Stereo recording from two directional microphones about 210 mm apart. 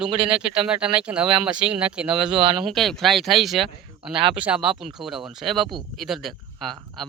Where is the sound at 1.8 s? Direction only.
5° right (ahead or behind).